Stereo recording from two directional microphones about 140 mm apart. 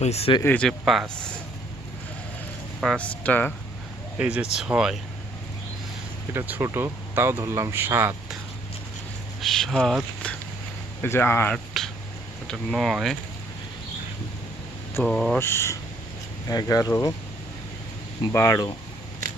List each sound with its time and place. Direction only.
0.0 s speech: 50° left (ahead or behind)
0.4 s speech: 10° left (ahead or behind)
0.7 s speech: centre (ahead or behind)
2.8 s speech: 5° left (ahead or behind)
4.2 s speech: 10° right (ahead or behind)
6.3 s speech: 15° right (ahead or behind)
9.4 s speech: centre (ahead or behind)
11.0 s speech: 15° left (ahead or behind)
11.5 s speech: centre (ahead or behind)
15.0 s speech: 5° left (ahead or behind)
15.4 s speech: 15° left (ahead or behind)
18.3 s speech: 20° left (ahead or behind)